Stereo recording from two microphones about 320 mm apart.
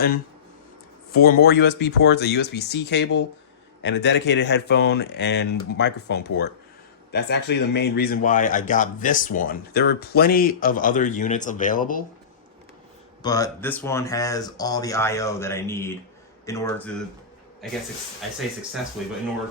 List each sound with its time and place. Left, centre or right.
1.1 s a man's voice: left
13.2 s speech: centre